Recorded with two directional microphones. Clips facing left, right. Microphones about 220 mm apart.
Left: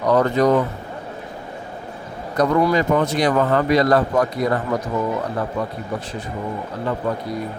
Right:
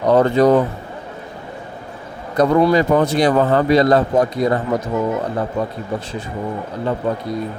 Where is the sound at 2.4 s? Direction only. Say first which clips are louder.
Right 4 dB; 25° right (ahead or behind).